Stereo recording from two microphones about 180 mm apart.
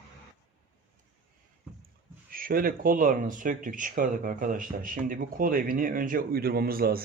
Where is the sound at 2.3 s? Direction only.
50° right (ahead or behind).